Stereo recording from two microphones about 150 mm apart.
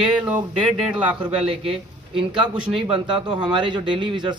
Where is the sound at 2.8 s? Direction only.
35° right (ahead or behind).